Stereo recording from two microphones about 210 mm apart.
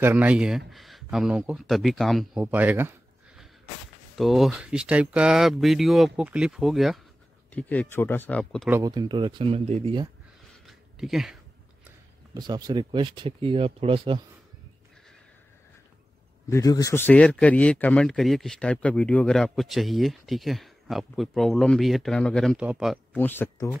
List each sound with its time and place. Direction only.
0.0 s speech: 10° right (ahead or behind)
8.6 s speech: 15° right (ahead or behind)
10.7 s a sound: centre (ahead or behind)
12.4 s speech: 20° right (ahead or behind)
16.4 s speech: 15° left (ahead or behind); by 22.9 s 5° right (ahead or behind)
23.1 s speech: 10° left (ahead or behind)